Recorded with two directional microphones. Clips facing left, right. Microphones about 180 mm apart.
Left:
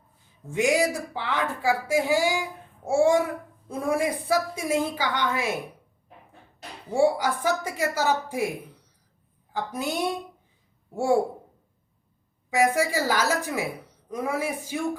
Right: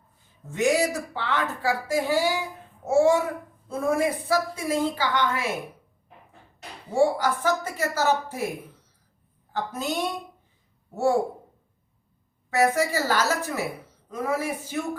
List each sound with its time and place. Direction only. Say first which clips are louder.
1.1 s a woman's voice: even; 10° left (ahead or behind)
6.9 s a woman's voice: even; 15° left (ahead or behind)
9.5 s a woman's voice: even; 10° left (ahead or behind)
12.5 s a woman's voice: even; 10° left (ahead or behind)